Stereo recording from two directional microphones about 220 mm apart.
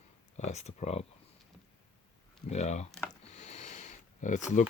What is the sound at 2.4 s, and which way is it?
Speech, 30° left (ahead or behind).